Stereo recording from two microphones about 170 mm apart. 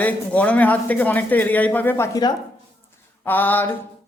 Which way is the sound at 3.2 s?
10° left (ahead or behind).